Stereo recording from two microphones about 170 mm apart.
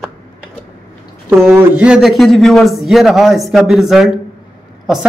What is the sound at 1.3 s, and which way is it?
Speech, 15° right (ahead or behind).